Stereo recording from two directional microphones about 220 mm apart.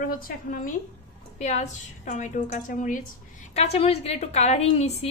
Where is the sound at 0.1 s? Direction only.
40° left (ahead or behind).